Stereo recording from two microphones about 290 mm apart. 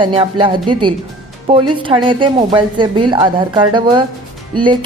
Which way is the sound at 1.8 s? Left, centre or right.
Centre.